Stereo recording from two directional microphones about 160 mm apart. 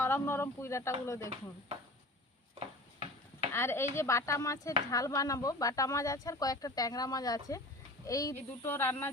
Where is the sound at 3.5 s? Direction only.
15° left (ahead or behind).